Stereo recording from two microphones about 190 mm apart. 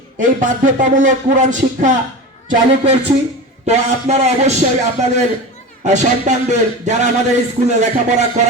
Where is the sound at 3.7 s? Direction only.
35° right (ahead or behind).